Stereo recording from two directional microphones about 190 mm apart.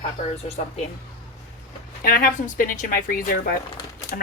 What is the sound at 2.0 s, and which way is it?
Speech, 50° left (ahead or behind).